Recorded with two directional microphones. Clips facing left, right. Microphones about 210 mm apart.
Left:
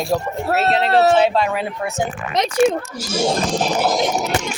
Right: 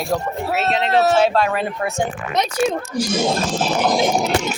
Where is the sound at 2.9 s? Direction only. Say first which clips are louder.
Right 1 dB; 10° left (ahead or behind).